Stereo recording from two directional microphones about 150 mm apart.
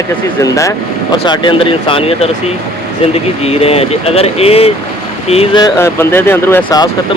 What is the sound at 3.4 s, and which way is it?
Speech, 45° left (ahead or behind).